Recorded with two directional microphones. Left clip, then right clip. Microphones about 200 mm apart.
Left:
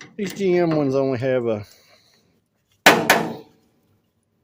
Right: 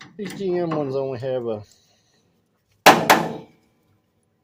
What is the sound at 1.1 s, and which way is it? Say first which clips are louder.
Speech: left 4 dB; 35° left (ahead or behind).